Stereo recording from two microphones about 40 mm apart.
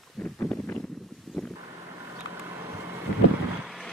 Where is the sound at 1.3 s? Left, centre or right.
Centre.